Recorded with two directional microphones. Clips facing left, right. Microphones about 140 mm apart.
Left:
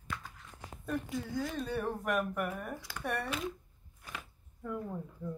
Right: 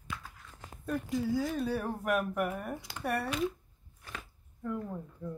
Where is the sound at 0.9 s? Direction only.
Centre (ahead or behind).